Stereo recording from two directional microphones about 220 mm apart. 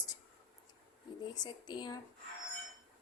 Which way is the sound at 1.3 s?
20° left (ahead or behind).